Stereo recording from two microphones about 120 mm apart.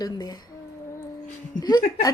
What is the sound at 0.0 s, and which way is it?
Speech, 35° left (ahead or behind).